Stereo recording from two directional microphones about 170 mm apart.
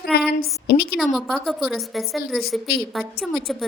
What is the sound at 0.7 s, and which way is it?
Speech, 70° left (ahead or behind).